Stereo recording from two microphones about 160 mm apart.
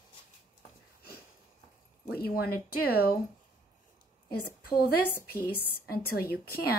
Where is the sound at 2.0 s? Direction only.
75° left (ahead or behind).